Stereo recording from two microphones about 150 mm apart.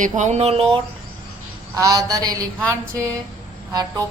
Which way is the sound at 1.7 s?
25° right (ahead or behind).